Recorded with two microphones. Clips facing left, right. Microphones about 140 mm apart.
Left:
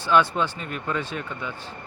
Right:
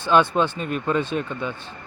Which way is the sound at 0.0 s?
25° right (ahead or behind).